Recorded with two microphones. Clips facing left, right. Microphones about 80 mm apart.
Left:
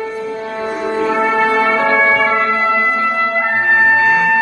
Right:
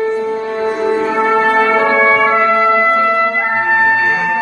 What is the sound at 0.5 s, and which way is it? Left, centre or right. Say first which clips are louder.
Music: right 3 dB; right.